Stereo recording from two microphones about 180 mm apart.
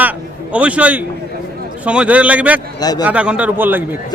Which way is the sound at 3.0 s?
5° right (ahead or behind).